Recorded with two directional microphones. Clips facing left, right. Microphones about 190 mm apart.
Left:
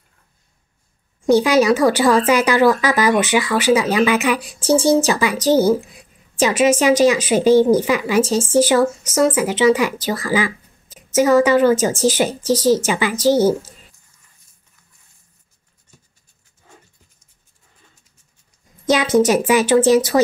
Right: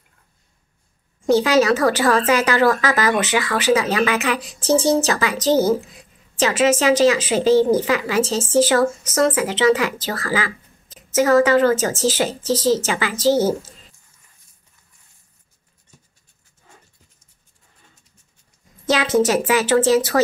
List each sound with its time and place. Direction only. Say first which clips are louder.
1.2 s speech: left 2 dB; 15° left (ahead or behind)
18.9 s a woman's voice: left 3 dB; 15° left (ahead or behind)